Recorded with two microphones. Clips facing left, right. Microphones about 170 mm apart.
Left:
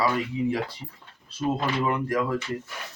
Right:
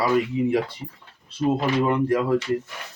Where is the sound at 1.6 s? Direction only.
30° right (ahead or behind).